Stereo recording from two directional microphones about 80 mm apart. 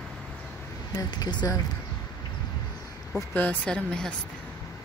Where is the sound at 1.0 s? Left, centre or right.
Left.